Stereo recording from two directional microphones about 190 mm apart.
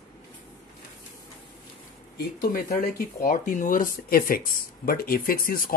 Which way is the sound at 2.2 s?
50° left (ahead or behind).